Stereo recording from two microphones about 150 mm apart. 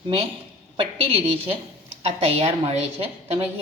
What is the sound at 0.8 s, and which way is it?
A woman's voice, 35° right (ahead or behind).